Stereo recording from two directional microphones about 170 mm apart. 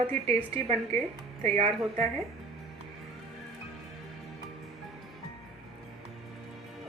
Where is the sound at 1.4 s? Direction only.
40° right (ahead or behind).